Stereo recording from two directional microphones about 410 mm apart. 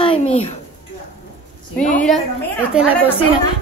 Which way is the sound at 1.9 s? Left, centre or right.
Centre.